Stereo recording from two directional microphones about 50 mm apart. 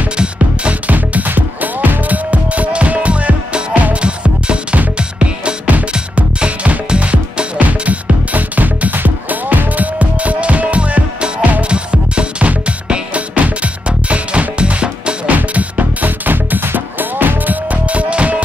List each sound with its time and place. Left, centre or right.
0.2 s music: right